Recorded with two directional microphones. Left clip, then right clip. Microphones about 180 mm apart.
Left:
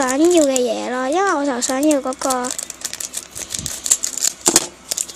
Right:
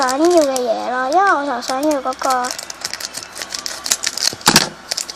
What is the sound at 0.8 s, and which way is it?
Speech, 80° left.